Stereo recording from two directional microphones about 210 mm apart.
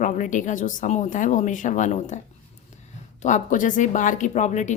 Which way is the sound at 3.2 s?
35° left (ahead or behind).